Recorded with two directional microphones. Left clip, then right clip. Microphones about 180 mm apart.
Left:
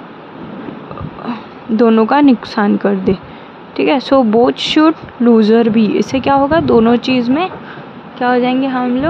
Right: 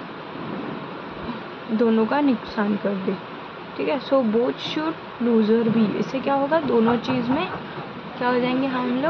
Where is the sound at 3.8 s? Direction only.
55° left (ahead or behind).